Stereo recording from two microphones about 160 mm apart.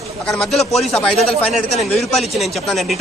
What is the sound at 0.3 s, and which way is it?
Speech, centre (ahead or behind).